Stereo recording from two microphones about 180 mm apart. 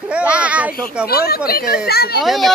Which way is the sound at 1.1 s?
60° left (ahead or behind).